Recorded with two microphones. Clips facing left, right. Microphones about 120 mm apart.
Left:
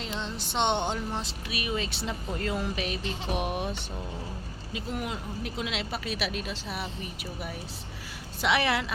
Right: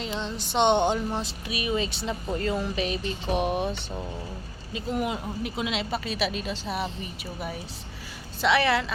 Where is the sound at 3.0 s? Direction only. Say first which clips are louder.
Right 2 dB; 90° left.